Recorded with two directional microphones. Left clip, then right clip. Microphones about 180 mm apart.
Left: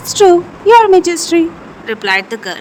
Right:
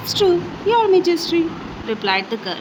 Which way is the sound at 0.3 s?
50° left (ahead or behind).